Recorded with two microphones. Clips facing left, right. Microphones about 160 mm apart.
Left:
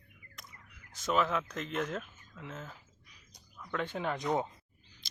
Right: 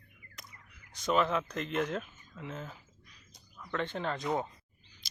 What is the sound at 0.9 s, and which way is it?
Speech, centre (ahead or behind).